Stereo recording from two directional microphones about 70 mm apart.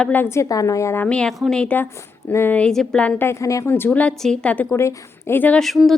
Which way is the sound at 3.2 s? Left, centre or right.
Left.